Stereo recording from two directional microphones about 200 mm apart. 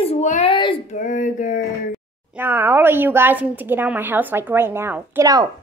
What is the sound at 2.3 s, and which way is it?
A woman's voice, 10° right (ahead or behind).